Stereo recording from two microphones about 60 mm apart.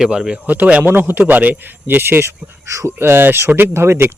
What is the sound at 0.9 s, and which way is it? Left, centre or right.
Speech, right.